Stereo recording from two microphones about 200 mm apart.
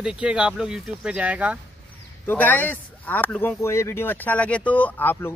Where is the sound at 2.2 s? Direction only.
10° left (ahead or behind).